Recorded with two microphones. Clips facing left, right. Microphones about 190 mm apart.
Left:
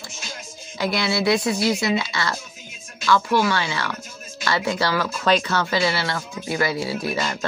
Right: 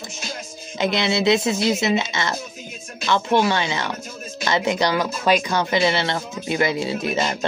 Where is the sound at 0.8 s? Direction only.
20° right (ahead or behind).